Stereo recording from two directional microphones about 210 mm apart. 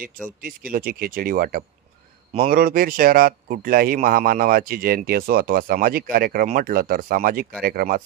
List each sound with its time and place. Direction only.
0.4 s speech: 40° right (ahead or behind)